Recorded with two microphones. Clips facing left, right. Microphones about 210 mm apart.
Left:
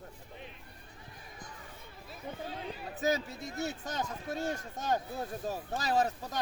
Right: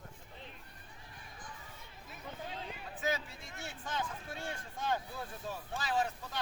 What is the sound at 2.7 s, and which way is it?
Speech, 40° left (ahead or behind).